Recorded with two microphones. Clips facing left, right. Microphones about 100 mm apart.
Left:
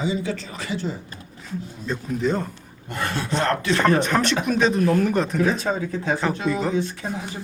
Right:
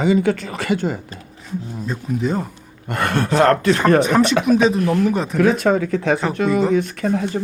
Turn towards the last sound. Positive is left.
turn(degrees=-60)  # may be behind; listen again after turning